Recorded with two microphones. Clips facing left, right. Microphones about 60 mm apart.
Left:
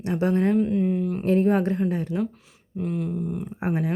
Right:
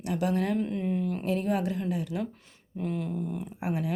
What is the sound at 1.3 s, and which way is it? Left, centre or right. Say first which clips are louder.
Speech: left 9 dB; left.